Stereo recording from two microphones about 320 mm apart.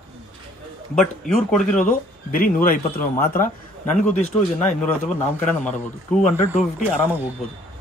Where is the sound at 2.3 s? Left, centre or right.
Left.